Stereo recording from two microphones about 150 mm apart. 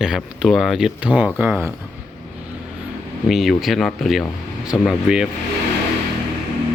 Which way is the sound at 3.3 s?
Centre (ahead or behind).